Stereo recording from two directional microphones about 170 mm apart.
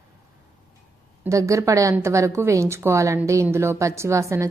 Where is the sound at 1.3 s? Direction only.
20° right (ahead or behind).